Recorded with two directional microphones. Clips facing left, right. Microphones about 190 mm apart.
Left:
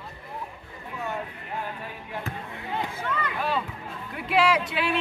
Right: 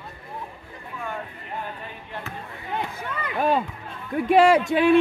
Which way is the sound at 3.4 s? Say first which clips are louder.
Right 9 dB; 50° right (ahead or behind).